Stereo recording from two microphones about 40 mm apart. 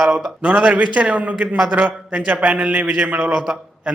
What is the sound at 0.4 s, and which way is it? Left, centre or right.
A man's voice, right.